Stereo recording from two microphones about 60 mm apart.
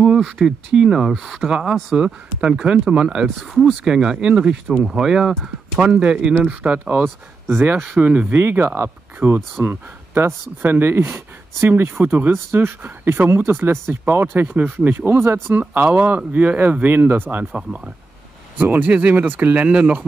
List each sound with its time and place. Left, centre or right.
0.0 s speech: centre
3.3 s speech: centre
4.6 s speech: centre
5.8 s speech: centre
7.4 s speech: right
8.1 s speech: right
8.4 s speech: right
9.2 s speech: right
12.3 s speech: right
15.7 s speech: right
17.5 s speech: centre
18.6 s speech: right